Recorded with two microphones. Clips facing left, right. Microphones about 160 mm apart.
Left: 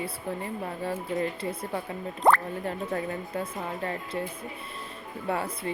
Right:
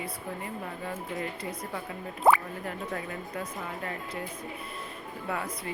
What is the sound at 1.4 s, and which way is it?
Speech, 30° left (ahead or behind).